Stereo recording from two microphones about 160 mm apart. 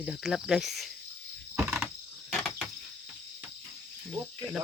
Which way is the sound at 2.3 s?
Centre (ahead or behind).